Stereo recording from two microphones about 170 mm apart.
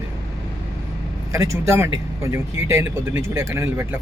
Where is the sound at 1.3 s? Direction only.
20° right (ahead or behind).